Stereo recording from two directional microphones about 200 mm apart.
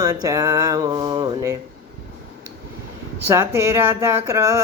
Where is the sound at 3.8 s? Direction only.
15° right (ahead or behind).